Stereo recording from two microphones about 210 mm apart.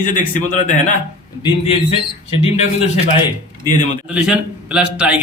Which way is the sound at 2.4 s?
30° left (ahead or behind).